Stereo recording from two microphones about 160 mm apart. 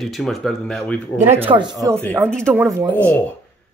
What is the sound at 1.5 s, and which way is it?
Speech, 35° right (ahead or behind).